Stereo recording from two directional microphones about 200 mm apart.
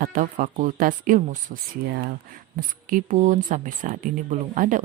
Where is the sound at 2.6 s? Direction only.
40° right (ahead or behind).